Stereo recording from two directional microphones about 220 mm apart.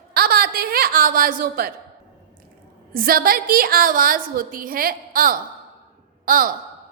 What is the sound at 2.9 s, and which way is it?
A woman's voice, 40° right (ahead or behind).